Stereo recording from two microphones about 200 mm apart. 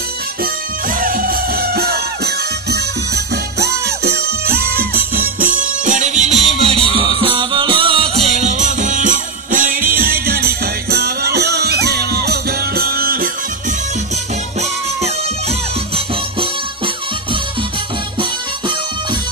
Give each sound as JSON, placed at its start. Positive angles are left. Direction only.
{"t": 0.4, "sound": "music", "side_deg": -45}
{"t": 14.6, "sound": "music", "side_deg": -35}